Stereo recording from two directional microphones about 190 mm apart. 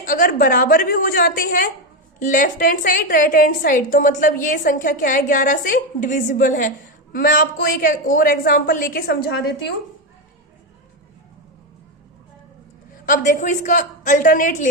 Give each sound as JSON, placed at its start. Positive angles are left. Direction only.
{"t": 0.0, "sound": "a woman's voice", "side_deg": 45}
{"t": 13.1, "sound": "a woman's voice", "side_deg": 40}